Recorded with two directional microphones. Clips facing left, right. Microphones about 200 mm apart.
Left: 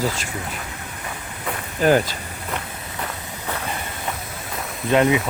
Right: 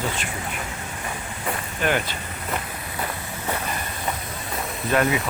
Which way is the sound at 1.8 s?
35° left (ahead or behind).